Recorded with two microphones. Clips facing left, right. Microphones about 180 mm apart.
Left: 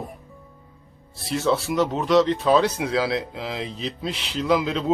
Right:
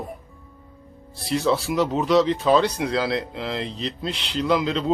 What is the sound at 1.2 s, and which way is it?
Speech, centre (ahead or behind).